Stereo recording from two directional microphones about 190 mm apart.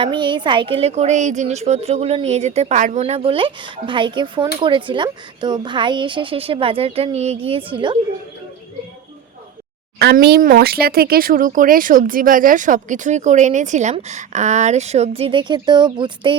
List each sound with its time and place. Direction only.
0.0 s a woman's voice: 25° right (ahead or behind)
10.0 s speech: 60° right (ahead or behind); by 16.3 s 25° right (ahead or behind)